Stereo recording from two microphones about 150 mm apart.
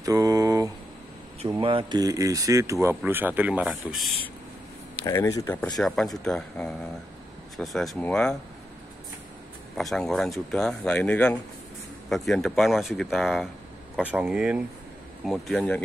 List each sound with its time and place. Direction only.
0.0 s mantra: 25° right (ahead or behind)
1.5 s speech: 35° right (ahead or behind); by 4.1 s 5° right (ahead or behind)
5.0 s speech: 20° left (ahead or behind)
5.6 s speech: 5° left (ahead or behind)
9.8 s speech: centre (ahead or behind)